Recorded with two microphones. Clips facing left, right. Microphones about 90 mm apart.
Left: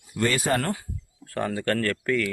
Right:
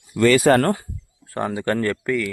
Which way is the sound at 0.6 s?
45° right (ahead or behind).